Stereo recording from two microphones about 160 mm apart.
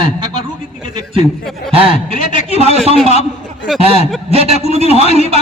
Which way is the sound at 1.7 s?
35° right (ahead or behind).